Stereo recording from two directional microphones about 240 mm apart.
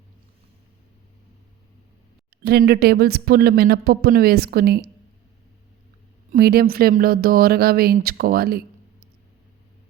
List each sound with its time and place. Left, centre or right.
2.4 s speech: right
6.3 s speech: right